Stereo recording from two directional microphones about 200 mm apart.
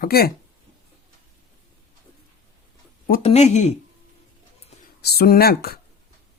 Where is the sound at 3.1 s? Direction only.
35° left (ahead or behind).